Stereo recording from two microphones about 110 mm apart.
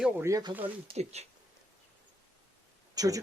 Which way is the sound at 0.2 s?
30° right (ahead or behind).